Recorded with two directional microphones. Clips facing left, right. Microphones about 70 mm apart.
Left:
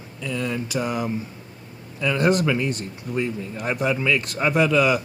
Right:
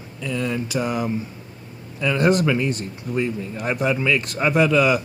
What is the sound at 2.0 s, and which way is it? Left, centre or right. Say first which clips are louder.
Speech: right 2 dB; right.